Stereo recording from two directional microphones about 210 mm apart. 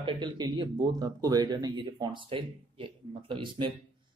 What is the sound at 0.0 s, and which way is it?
Speech, 25° right (ahead or behind).